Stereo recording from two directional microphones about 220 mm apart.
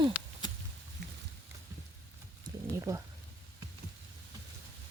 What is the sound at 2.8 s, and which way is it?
Speech, 15° right (ahead or behind).